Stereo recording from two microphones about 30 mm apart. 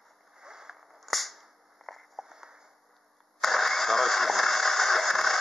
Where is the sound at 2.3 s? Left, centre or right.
Centre.